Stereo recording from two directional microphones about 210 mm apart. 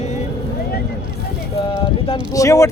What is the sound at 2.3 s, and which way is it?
Speech, 15° left (ahead or behind).